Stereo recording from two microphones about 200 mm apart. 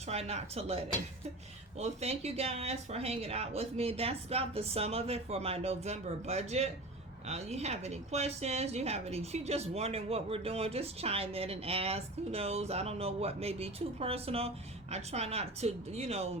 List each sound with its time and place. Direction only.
0.1 s speech: 30° right (ahead or behind)